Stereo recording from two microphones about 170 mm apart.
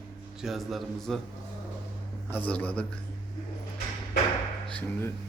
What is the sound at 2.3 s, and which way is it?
Speech, 10° left (ahead or behind).